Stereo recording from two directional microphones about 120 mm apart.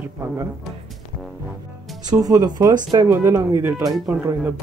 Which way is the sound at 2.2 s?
30° right (ahead or behind).